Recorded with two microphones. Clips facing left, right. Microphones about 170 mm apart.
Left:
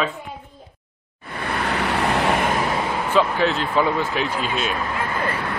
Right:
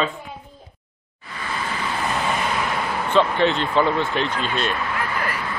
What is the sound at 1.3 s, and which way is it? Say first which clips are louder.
Vehicle: left 4 dB; 65° left (ahead or behind).